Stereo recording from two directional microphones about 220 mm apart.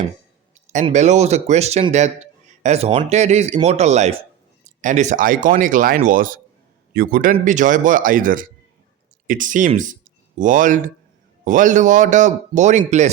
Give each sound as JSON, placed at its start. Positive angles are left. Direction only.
{"t": 0.7, "sound": "a man's voice", "side_deg": -30}